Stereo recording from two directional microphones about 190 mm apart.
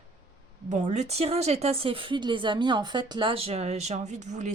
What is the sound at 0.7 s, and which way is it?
Speech, 40° right (ahead or behind).